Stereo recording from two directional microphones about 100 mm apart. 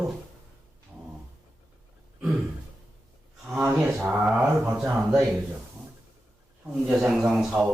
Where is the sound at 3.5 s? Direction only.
10° right (ahead or behind).